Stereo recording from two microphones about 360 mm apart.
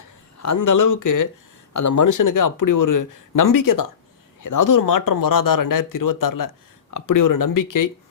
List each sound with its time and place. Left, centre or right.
0.3 s speech: left